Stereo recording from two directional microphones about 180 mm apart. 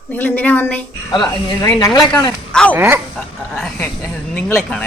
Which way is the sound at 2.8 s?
10° right (ahead or behind).